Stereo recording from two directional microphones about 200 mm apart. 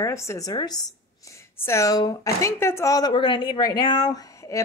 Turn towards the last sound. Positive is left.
turn(degrees=15)  # may be behind; listen again after turning